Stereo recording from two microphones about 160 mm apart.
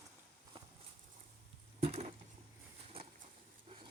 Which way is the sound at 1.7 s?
40° right (ahead or behind).